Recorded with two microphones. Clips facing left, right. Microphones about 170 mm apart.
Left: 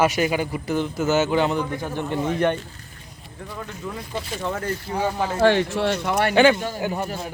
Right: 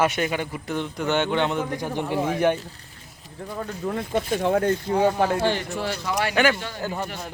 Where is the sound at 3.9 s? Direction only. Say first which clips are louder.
Right 9 dB; 55° right (ahead or behind).